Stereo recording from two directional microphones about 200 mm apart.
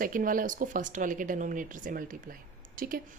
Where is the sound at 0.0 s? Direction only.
45° right (ahead or behind).